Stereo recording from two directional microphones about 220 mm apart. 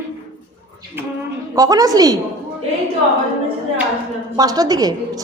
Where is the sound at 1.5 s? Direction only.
15° right (ahead or behind).